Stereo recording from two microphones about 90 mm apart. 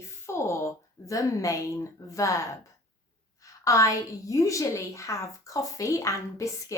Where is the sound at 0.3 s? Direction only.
30° left (ahead or behind).